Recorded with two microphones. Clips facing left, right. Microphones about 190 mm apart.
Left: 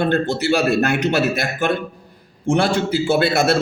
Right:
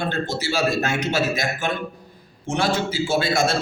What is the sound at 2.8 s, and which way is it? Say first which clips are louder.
Speech: left 5 dB; 60° left (ahead or behind).